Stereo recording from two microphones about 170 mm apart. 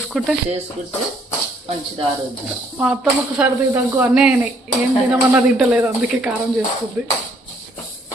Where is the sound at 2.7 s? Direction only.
5° right (ahead or behind).